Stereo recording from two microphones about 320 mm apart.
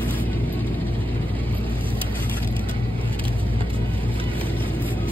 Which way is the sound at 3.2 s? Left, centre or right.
Centre.